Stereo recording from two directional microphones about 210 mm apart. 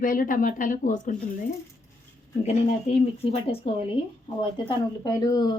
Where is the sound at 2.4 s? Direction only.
30° left (ahead or behind).